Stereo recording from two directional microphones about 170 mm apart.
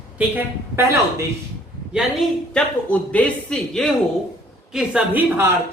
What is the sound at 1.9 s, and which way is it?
A woman's voice, centre (ahead or behind).